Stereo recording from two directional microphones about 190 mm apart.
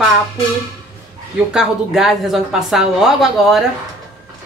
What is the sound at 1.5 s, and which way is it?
A woman's voice, centre (ahead or behind).